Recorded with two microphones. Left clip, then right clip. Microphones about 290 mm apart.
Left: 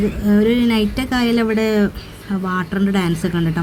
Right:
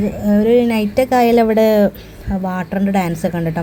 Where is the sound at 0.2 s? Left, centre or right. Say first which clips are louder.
Right 4 dB; centre.